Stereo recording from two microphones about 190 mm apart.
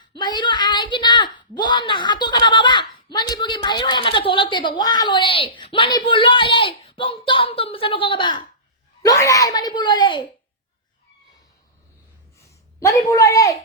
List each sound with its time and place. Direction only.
0.1 s a woman's voice: 25° left (ahead or behind)
12.4 s speech: 15° left (ahead or behind)